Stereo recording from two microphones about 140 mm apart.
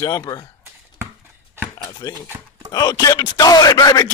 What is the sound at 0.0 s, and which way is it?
Speech, 25° left (ahead or behind).